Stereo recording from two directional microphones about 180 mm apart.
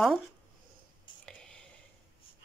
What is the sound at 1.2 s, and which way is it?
Whispering, 5° left (ahead or behind).